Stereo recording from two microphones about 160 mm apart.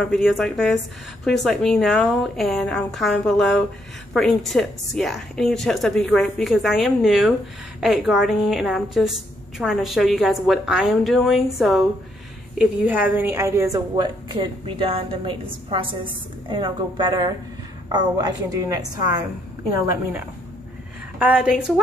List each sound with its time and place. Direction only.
0.0 s a woman's voice: 5° left (ahead or behind); by 19.2 s 25° right (ahead or behind)
21.2 s a woman's voice: 10° right (ahead or behind)